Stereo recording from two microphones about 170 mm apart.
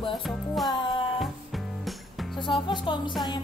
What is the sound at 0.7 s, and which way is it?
Music, 30° left (ahead or behind).